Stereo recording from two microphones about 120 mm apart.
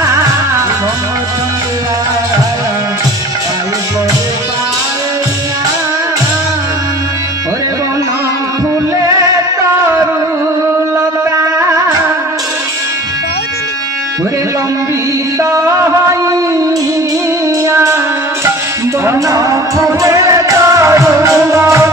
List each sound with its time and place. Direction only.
15.5 s music: 25° right (ahead or behind)
17.6 s music: 25° right (ahead or behind)
19.0 s music: 30° right (ahead or behind)